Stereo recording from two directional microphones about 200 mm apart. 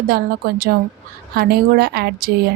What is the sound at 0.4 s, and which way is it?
A woman's voice, 45° right (ahead or behind).